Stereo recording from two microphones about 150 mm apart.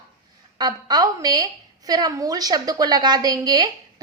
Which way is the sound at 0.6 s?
30° right (ahead or behind).